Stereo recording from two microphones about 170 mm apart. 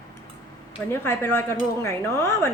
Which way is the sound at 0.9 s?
15° left (ahead or behind).